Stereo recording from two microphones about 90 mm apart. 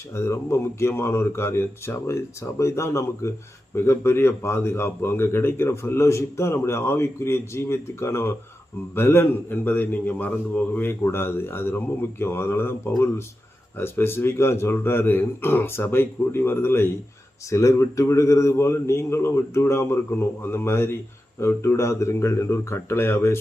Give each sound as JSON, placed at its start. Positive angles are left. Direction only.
{"t": 0.1, "sound": "a man's voice", "side_deg": 30}